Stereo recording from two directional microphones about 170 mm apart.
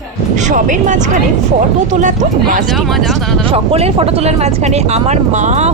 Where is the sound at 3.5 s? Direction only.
35° right (ahead or behind).